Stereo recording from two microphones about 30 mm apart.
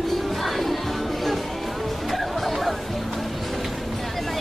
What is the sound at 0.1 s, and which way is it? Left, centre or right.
Music, centre.